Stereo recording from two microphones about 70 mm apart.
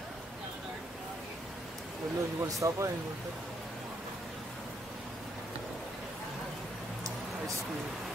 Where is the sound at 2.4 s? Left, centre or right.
Right.